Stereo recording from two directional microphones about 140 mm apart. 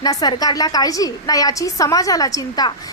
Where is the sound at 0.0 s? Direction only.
30° left (ahead or behind).